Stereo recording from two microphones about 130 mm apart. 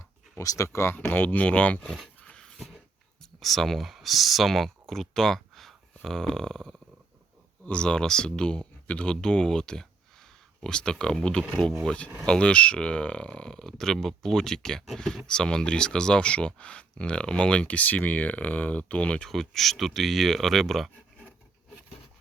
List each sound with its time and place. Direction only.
0.3 s speech: 25° left (ahead or behind); by 21.3 s 5° left (ahead or behind)